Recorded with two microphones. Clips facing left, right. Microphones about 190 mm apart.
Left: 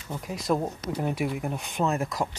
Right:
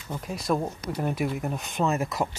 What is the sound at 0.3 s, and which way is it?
Speech, 15° left (ahead or behind).